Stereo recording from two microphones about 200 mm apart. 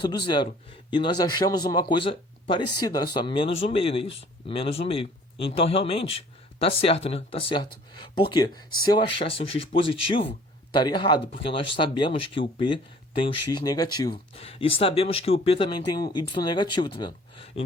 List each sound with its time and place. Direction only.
0.0 s speech: 25° left (ahead or behind)